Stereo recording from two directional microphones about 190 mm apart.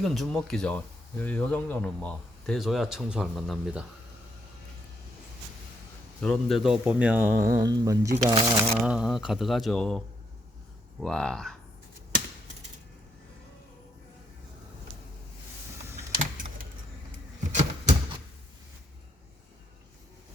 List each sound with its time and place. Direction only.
0.0 s speech: centre (ahead or behind)
6.1 s speech: 5° left (ahead or behind); by 8.4 s 15° right (ahead or behind)
8.8 s speech: 5° right (ahead or behind)
11.0 s speech: 5° left (ahead or behind)
17.5 s a sound: 35° right (ahead or behind)